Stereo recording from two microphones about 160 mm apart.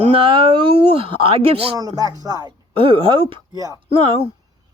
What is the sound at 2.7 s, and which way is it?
Speech, 35° right (ahead or behind).